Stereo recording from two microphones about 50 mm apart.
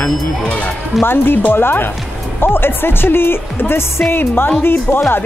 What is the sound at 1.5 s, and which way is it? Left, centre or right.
Speech, left.